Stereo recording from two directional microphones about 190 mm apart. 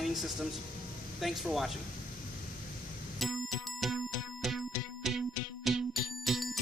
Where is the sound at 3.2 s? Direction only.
Centre (ahead or behind).